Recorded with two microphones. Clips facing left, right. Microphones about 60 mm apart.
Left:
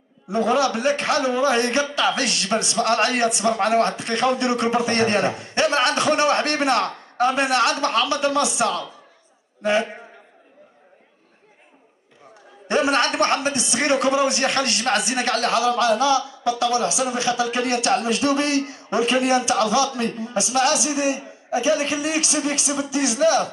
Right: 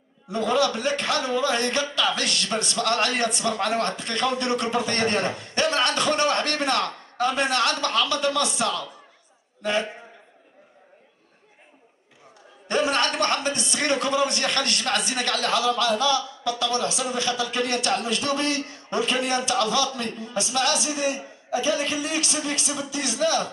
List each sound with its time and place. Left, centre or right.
0.3 s a man's voice: centre
9.6 s a man's voice: centre
12.6 s a man's voice: centre